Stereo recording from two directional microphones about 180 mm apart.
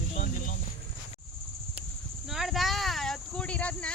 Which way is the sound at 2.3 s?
Centre (ahead or behind).